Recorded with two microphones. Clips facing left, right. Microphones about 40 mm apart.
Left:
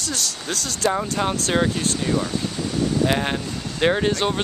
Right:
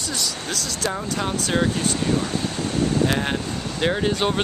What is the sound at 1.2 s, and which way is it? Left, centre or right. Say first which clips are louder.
Speech: left 3 dB; centre.